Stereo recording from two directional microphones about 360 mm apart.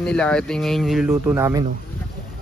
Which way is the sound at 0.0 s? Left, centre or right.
Centre.